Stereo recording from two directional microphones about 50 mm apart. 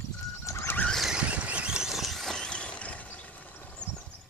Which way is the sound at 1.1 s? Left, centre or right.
Right.